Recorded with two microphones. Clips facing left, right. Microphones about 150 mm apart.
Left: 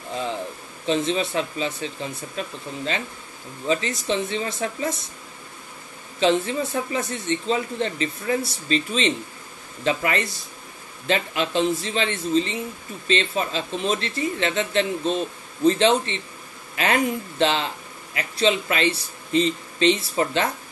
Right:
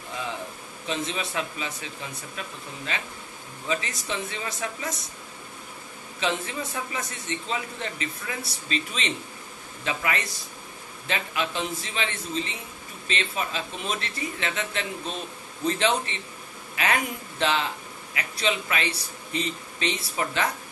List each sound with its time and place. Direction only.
0.8 s a man's voice: 30° left (ahead or behind)
6.1 s a man's voice: 30° left (ahead or behind)